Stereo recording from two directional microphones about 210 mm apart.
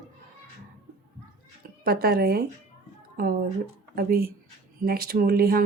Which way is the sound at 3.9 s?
45° right (ahead or behind).